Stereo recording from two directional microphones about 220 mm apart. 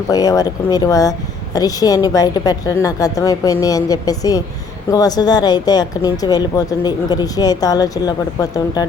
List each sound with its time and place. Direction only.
0.1 s speech: 15° left (ahead or behind)